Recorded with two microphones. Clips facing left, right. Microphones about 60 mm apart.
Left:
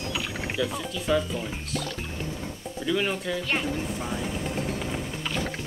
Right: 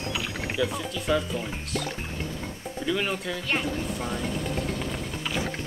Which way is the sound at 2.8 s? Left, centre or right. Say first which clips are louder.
Left 1 dB; centre.